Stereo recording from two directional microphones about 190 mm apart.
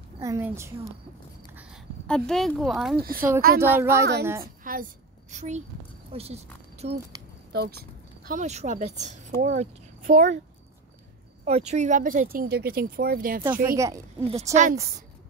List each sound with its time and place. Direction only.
0.2 s a woman's voice: 15° right (ahead or behind)
1.5 s a sound: 5° right (ahead or behind)
2.0 s speech: 5° left (ahead or behind)
3.0 s a woman's voice: 50° right (ahead or behind)
3.6 s a woman's voice: 10° right (ahead or behind)
4.4 s a woman's voice: 45° right (ahead or behind)
5.3 s speech: 35° right (ahead or behind)
7.5 s speech: 60° right (ahead or behind)
8.3 s speech: 40° right (ahead or behind)
11.7 s a woman's voice: 40° right (ahead or behind)
13.5 s a woman's voice: 15° right (ahead or behind)
14.5 s speech: 40° right (ahead or behind)